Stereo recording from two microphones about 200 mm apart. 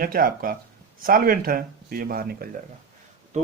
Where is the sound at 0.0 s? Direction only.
45° right (ahead or behind).